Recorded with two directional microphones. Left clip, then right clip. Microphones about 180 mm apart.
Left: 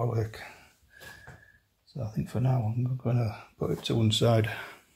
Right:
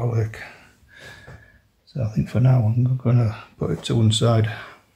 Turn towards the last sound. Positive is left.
turn(degrees=25)  # may be behind; listen again after turning